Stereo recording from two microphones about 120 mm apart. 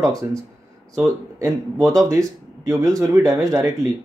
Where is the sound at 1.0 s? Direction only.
25° right (ahead or behind).